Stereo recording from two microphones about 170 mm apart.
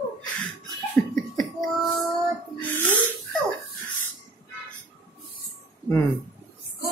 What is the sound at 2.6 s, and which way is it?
Snort, 10° left (ahead or behind).